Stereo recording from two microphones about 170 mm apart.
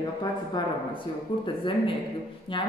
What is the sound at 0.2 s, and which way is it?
Speech, 25° left (ahead or behind).